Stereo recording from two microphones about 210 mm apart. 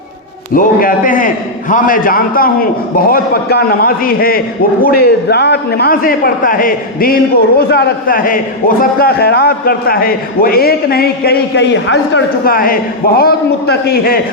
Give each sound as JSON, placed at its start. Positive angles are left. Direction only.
{"t": 0.5, "sound": "a man's voice", "side_deg": 40}